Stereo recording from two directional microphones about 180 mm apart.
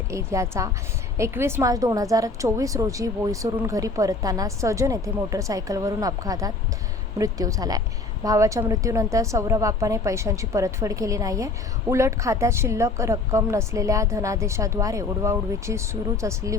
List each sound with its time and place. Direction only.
0.1 s a woman's voice: 15° right (ahead or behind)